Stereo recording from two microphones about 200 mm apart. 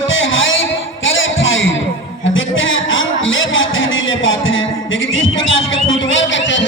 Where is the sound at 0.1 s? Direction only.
75° left (ahead or behind).